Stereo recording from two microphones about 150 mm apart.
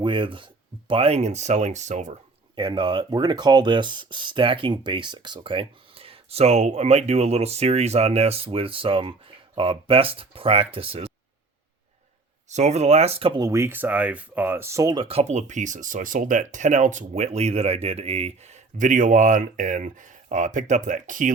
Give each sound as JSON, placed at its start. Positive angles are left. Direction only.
{"t": 0.0, "sound": "speech", "side_deg": -35}
{"t": 2.6, "sound": "speech", "side_deg": -30}
{"t": 12.5, "sound": "speech", "side_deg": -50}
{"t": 13.5, "sound": "speech", "side_deg": -15}
{"t": 14.9, "sound": "speech", "side_deg": -40}